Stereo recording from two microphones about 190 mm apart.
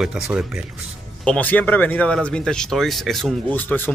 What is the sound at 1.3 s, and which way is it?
Speech, 10° left (ahead or behind).